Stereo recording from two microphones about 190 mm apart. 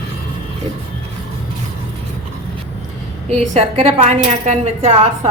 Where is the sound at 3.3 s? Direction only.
35° right (ahead or behind).